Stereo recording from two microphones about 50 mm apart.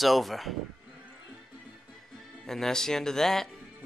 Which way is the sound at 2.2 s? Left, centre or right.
Centre.